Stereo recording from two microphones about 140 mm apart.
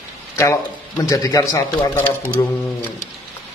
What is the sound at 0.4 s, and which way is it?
Speech, 20° left (ahead or behind).